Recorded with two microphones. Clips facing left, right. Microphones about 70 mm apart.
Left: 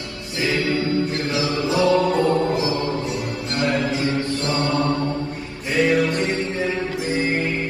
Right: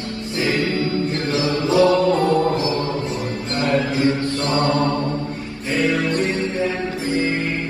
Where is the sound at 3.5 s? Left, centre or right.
Right.